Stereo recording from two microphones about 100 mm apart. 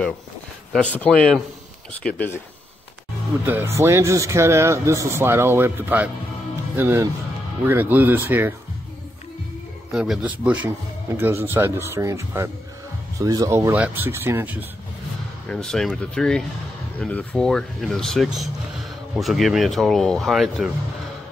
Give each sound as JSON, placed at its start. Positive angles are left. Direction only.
{"t": 0.7, "sound": "speech", "side_deg": 10}
{"t": 3.4, "sound": "speech", "side_deg": -25}
{"t": 9.9, "sound": "speech", "side_deg": -5}
{"t": 10.2, "sound": "a man's voice", "side_deg": -15}
{"t": 13.7, "sound": "speech", "side_deg": -15}
{"t": 15.4, "sound": "speech", "side_deg": 5}